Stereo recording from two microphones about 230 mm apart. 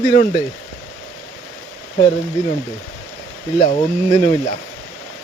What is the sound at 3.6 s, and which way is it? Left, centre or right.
Speech, centre.